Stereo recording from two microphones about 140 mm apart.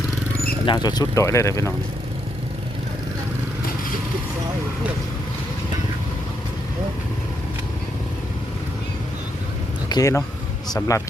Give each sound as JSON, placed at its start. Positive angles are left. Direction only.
{"t": 0.6, "sound": "speech", "side_deg": 35}
{"t": 9.9, "sound": "speech", "side_deg": 20}